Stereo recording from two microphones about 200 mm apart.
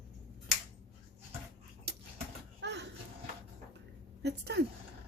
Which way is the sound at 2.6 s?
60° right (ahead or behind).